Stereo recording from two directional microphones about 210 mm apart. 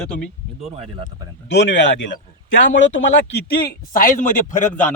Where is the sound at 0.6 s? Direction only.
30° right (ahead or behind).